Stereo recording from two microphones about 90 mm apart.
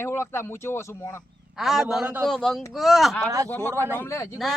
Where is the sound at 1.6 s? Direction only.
Centre (ahead or behind).